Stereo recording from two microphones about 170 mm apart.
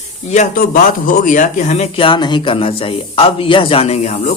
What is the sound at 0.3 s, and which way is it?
Speech, 45° left (ahead or behind).